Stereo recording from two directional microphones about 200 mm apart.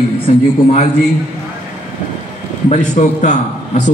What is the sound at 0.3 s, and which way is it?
Speech, 35° left (ahead or behind).